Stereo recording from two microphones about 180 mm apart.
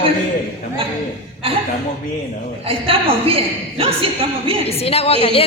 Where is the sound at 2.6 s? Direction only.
30° right (ahead or behind).